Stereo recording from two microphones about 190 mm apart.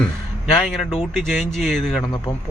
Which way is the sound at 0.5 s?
Centre (ahead or behind).